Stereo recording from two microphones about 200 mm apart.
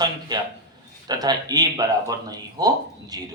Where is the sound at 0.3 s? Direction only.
20° right (ahead or behind).